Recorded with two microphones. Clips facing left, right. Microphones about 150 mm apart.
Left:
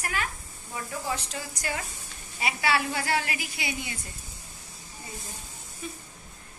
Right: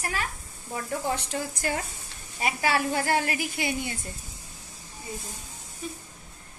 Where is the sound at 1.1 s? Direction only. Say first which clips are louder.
Right 4 dB; 55° right (ahead or behind).